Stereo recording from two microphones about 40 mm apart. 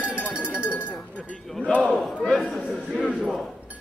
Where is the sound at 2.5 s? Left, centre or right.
Right.